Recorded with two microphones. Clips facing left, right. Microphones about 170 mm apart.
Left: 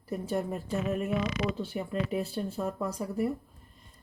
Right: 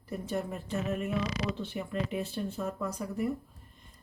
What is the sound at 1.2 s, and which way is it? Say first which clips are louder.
Speech: left 2 dB; 35° right (ahead or behind).